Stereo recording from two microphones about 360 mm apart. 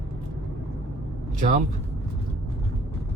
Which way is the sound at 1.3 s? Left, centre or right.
Right.